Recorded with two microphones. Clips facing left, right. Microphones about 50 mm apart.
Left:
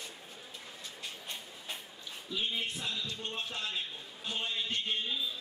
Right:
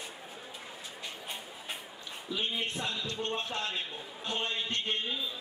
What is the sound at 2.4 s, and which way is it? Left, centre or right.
Music, centre.